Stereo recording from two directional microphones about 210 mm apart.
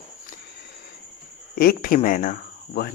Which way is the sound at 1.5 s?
45° left (ahead or behind).